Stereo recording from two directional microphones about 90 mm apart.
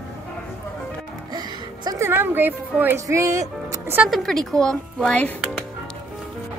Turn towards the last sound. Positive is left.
turn(degrees=15)  # may be behind; listen again after turning